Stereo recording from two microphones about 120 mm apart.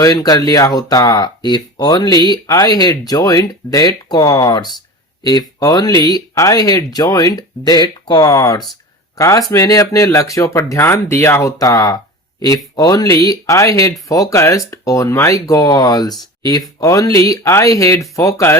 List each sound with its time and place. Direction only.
0.0 s speech: 30° left (ahead or behind)